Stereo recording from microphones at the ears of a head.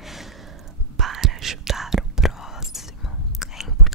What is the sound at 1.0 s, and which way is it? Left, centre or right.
Whispering, right.